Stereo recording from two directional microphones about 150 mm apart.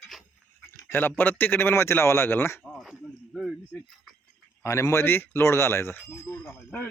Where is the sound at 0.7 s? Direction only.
15° left (ahead or behind).